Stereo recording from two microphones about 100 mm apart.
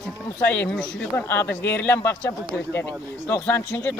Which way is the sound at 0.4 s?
15° left (ahead or behind).